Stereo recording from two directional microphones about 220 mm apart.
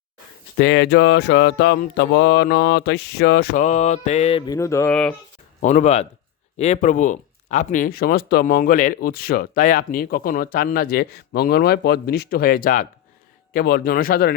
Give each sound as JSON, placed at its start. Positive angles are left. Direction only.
{"t": 0.5, "sound": "speech", "side_deg": 50}
{"t": 5.6, "sound": "speech", "side_deg": 30}